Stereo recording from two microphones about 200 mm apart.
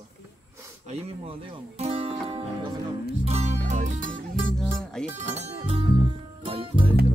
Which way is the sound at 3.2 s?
30° right (ahead or behind).